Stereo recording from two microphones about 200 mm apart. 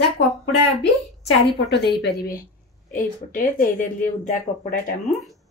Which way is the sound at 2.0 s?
50° left (ahead or behind).